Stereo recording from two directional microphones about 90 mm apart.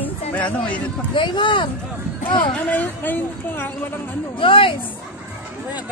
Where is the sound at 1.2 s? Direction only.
65° left (ahead or behind).